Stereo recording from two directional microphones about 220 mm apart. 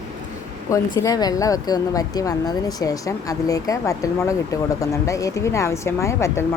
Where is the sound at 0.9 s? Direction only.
15° left (ahead or behind).